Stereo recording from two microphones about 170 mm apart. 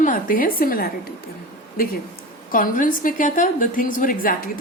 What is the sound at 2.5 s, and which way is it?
A woman's voice, 55° left (ahead or behind).